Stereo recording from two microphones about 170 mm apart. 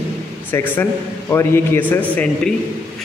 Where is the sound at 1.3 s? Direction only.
15° left (ahead or behind).